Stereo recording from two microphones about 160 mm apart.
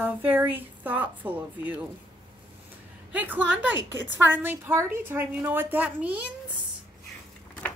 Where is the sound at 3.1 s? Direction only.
10° right (ahead or behind).